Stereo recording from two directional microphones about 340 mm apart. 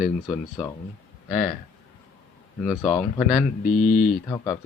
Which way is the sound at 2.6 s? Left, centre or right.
Centre.